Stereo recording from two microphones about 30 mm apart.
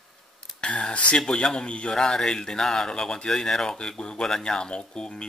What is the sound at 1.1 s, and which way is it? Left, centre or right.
Speech, left.